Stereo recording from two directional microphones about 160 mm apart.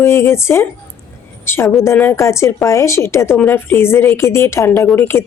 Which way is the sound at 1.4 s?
15° left (ahead or behind).